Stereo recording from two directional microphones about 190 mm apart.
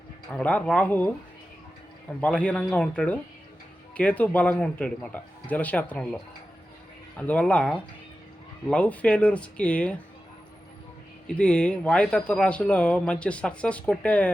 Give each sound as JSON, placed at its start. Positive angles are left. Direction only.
{"t": 0.3, "sound": "speech", "side_deg": 5}
{"t": 2.2, "sound": "speech", "side_deg": 5}
{"t": 11.3, "sound": "speech", "side_deg": 5}